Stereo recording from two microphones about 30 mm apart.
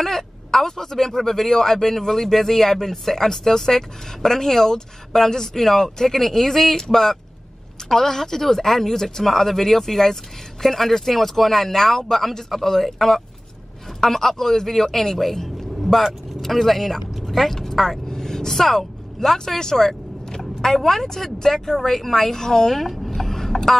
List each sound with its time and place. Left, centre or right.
0.0 s speech: centre